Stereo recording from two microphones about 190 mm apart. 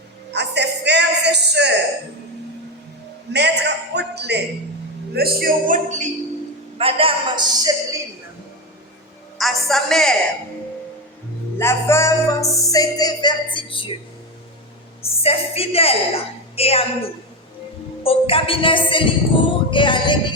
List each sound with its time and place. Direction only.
0.3 s a sound: 60° right (ahead or behind)
3.3 s a man's voice: 65° right (ahead or behind); by 6.1 s 40° right (ahead or behind)
6.7 s a woman's voice: 30° right (ahead or behind)
9.4 s a woman's voice: centre (ahead or behind)
11.5 s music: 15° left (ahead or behind)
15.0 s a woman's voice: 30° left (ahead or behind)
18.0 s music: 30° left (ahead or behind)